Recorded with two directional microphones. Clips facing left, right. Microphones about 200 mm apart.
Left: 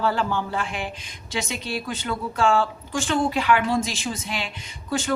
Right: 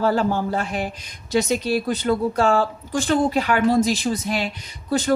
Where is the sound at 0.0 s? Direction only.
40° right (ahead or behind).